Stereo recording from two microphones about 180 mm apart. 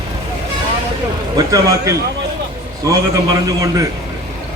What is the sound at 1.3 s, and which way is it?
A man's voice, 20° right (ahead or behind).